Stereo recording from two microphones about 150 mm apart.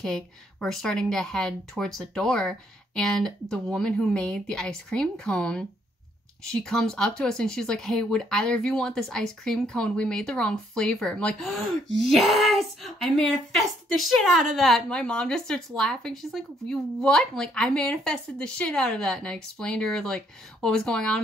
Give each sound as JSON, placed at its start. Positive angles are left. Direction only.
{"t": 0.0, "sound": "speech", "side_deg": 5}